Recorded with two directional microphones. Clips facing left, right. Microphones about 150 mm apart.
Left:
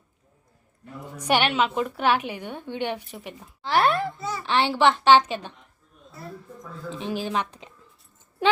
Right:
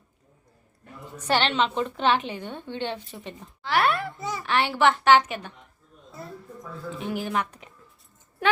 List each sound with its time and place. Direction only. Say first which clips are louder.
1.1 s a woman's voice: left 1 dB; 10° left (ahead or behind)
3.6 s a woman's voice: left 2 dB; 30° left (ahead or behind)
6.9 s a woman's voice: left 1 dB; 25° left (ahead or behind)